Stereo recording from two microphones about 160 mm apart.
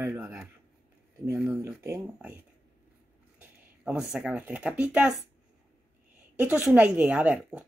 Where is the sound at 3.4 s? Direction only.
5° right (ahead or behind).